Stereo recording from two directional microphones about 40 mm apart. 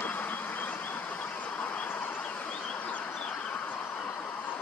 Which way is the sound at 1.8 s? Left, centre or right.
Left.